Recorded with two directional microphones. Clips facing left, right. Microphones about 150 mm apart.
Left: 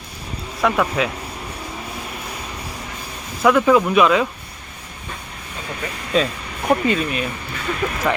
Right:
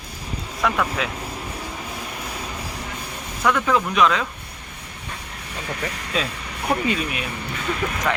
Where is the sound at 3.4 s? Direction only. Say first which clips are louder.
Left 6 dB; 10° left (ahead or behind).